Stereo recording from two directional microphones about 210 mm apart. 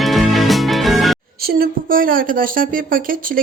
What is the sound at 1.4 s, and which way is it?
A woman's voice, 45° right (ahead or behind).